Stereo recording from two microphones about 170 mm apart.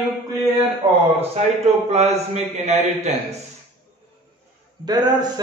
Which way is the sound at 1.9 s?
40° right (ahead or behind).